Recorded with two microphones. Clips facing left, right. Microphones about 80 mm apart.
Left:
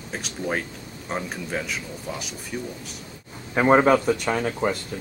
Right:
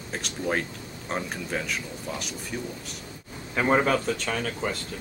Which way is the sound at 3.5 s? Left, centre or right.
Left.